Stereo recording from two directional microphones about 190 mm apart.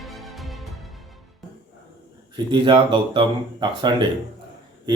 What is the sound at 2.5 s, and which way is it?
A man's voice, 25° right (ahead or behind).